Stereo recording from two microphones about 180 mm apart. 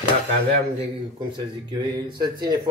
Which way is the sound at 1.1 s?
25° right (ahead or behind).